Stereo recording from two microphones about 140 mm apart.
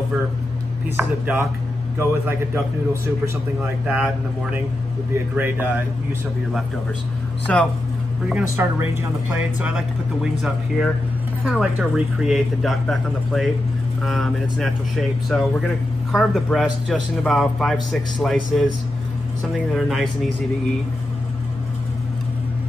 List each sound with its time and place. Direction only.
0.9 s a man's voice: 10° right (ahead or behind)
7.5 s speech: 5° left (ahead or behind)
8.3 s a man's voice: 10° right (ahead or behind)
19.7 s speech: centre (ahead or behind)